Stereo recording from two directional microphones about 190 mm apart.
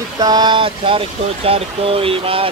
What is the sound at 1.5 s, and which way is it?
Speech, 30° right (ahead or behind).